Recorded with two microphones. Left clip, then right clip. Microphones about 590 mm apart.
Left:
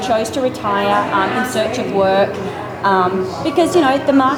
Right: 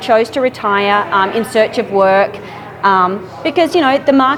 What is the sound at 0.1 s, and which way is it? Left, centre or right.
A woman's voice, right.